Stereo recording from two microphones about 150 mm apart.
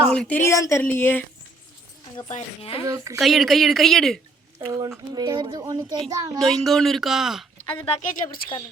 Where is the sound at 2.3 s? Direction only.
45° left (ahead or behind).